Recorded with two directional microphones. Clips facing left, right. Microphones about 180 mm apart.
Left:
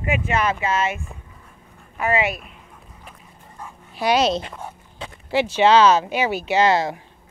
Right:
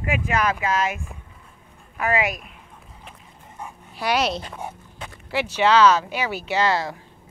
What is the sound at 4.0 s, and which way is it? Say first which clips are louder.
Speech: left 4 dB; 20° left (ahead or behind).